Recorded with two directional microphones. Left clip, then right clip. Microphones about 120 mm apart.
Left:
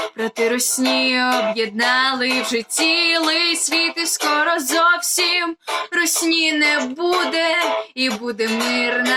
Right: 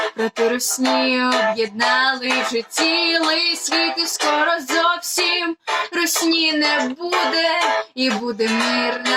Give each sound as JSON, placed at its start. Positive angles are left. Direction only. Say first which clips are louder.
{"t": 0.8, "sound": "music", "louder": "even", "side_deg": -50}
{"t": 3.2, "sound": "a sound", "louder": "left 1 dB", "side_deg": -5}
{"t": 3.7, "sound": "music", "louder": "even", "side_deg": -45}